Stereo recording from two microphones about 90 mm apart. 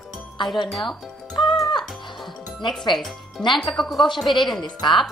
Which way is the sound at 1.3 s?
55° left (ahead or behind).